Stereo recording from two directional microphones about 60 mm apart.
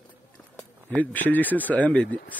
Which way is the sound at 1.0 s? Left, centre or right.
Left.